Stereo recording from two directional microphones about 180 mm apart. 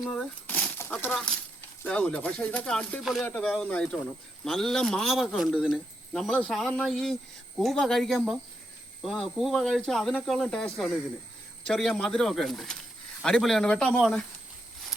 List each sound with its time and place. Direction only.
0.0 s speech: 5° left (ahead or behind)